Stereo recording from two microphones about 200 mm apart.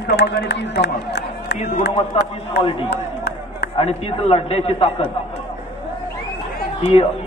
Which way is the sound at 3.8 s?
30° left (ahead or behind).